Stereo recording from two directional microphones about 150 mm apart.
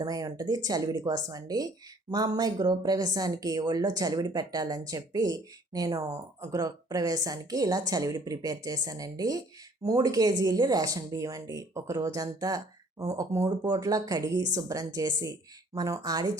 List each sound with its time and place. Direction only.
0.0 s speech: 25° right (ahead or behind)